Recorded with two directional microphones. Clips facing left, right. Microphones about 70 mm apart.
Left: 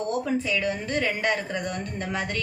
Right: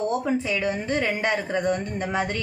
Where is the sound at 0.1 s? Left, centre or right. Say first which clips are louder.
Right 1 dB; right.